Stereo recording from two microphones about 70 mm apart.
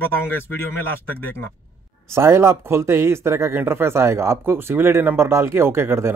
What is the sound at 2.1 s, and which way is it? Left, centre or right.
Speech, right.